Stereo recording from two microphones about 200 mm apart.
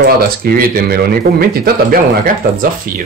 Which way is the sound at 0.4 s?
45° right (ahead or behind).